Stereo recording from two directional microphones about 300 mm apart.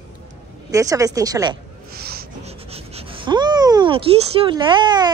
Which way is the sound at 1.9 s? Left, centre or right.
Right.